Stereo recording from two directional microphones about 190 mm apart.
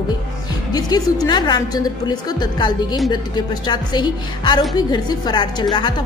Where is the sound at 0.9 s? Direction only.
20° left (ahead or behind).